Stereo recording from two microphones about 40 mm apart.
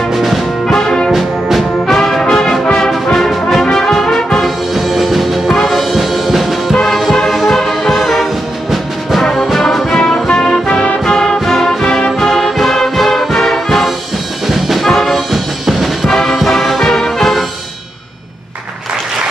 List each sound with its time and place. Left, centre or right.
0.1 s music: centre
0.7 s brass instrument: centre
1.9 s music: centre
3.6 s brass instrument: centre
4.7 s music: centre
9.9 s music: centre
14.5 s brass instrument: centre
15.3 s music: centre
16.1 s music: centre